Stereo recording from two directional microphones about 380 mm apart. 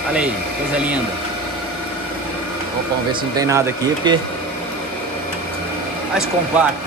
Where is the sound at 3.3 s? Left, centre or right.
Centre.